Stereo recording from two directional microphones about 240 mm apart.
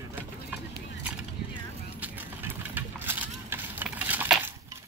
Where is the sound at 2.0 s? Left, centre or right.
Centre.